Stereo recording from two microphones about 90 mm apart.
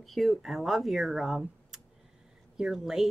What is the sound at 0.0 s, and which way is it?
Speech, centre (ahead or behind).